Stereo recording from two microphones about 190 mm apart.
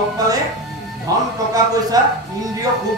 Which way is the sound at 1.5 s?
20° right (ahead or behind).